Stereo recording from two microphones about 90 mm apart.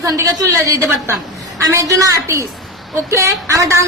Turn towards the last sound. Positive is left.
turn(degrees=-35)  # may be behind; listen again after turning